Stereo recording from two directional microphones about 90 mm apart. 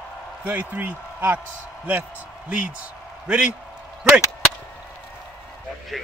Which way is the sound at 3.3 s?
10° right (ahead or behind).